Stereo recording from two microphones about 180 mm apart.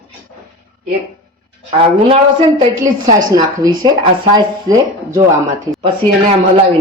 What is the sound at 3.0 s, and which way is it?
Speech, 20° right (ahead or behind).